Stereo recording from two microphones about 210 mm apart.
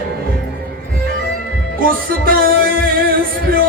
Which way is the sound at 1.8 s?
45° right (ahead or behind).